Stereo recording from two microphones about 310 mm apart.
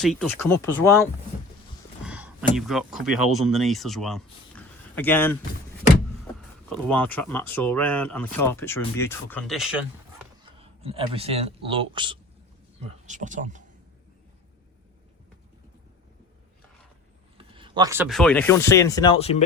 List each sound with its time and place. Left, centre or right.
0.0 s speech: centre
2.0 s speech: centre
10.6 s speech: centre
17.3 s speech: centre